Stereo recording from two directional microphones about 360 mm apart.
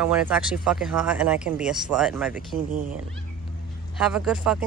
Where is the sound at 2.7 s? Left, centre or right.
Right.